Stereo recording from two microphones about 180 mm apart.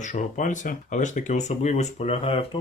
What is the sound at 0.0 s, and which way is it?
Speech, 45° left (ahead or behind).